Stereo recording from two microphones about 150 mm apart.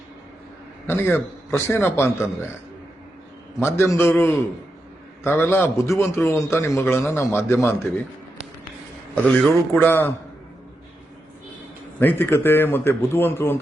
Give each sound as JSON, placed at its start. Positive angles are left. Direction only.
{"t": 0.9, "sound": "a man's voice", "side_deg": 15}
{"t": 3.6, "sound": "a man's voice", "side_deg": 15}
{"t": 5.2, "sound": "a man's voice", "side_deg": 15}
{"t": 9.2, "sound": "a man's voice", "side_deg": 5}
{"t": 9.7, "sound": "a man's voice", "side_deg": 15}
{"t": 11.9, "sound": "a man's voice", "side_deg": 15}